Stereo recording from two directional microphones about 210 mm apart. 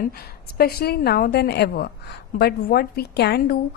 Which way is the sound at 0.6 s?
45° left (ahead or behind).